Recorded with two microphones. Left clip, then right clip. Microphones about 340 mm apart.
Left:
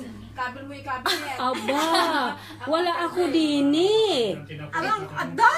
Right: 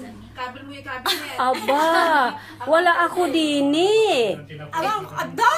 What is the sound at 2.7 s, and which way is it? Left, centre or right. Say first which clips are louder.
A woman's voice: right 7 dB; centre.